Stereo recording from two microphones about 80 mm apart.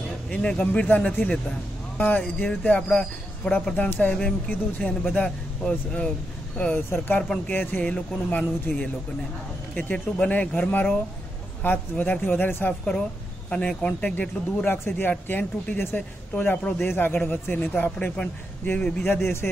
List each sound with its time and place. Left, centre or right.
0.3 s speech: centre
6.6 s speech: left
7.2 s speech: centre
7.5 s speech: left
13.5 s speech: centre
19.0 s speech: left